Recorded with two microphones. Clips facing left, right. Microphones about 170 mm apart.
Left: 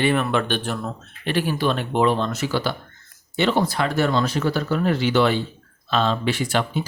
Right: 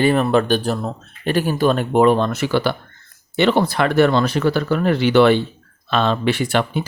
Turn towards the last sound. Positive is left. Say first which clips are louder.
# right 4 dB
turn(degrees=-60)  # may be behind; listen again after turning